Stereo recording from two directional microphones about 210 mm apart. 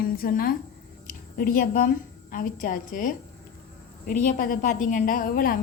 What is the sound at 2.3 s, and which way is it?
A woman's voice, 40° left (ahead or behind).